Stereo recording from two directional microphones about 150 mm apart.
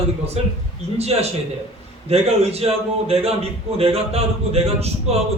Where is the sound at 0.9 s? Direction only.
45° right (ahead or behind).